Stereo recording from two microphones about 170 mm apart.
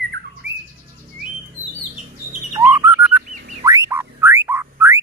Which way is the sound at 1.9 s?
45° right (ahead or behind).